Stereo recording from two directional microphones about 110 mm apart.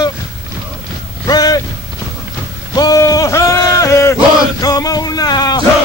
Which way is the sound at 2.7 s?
40° left (ahead or behind).